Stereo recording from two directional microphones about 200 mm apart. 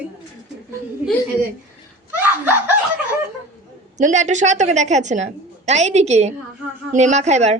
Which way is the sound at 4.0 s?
35° right (ahead or behind).